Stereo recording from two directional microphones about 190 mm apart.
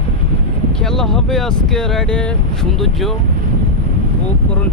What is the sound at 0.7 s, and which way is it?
Speech, 5° left (ahead or behind).